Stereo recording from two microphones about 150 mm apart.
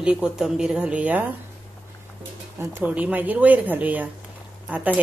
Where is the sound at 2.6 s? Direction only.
10° right (ahead or behind).